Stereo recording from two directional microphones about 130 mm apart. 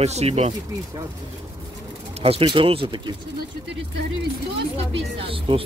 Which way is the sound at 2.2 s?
45° right (ahead or behind).